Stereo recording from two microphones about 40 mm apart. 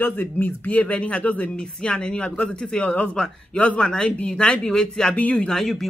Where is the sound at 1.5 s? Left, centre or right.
Left.